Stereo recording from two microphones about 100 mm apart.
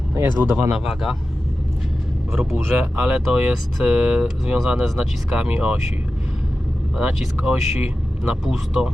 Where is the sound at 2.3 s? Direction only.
5° right (ahead or behind).